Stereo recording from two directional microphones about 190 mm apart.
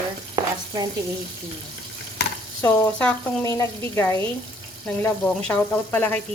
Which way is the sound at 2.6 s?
10° left (ahead or behind).